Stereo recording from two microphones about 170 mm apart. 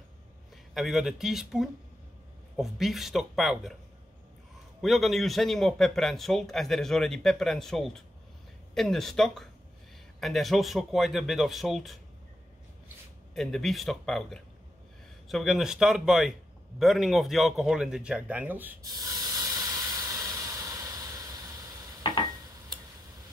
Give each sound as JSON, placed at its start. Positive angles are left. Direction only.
{"t": 0.7, "sound": "a man's voice", "side_deg": 0}
{"t": 4.8, "sound": "a man's voice", "side_deg": 0}
{"t": 13.3, "sound": "a man's voice", "side_deg": 0}
{"t": 18.8, "sound": "hiss", "side_deg": -20}
{"t": 22.0, "sound": "a sound", "side_deg": 25}